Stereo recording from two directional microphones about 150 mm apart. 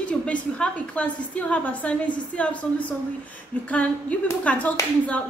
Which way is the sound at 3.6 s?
10° left (ahead or behind).